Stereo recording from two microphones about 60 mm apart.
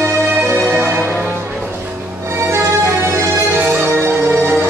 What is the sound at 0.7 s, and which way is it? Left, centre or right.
Music, right.